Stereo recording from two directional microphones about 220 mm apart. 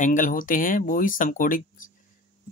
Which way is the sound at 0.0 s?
35° left (ahead or behind).